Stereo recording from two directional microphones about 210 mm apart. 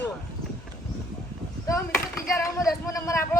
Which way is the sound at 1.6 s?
15° left (ahead or behind).